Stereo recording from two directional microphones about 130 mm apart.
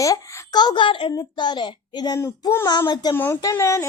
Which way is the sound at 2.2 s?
20° left (ahead or behind).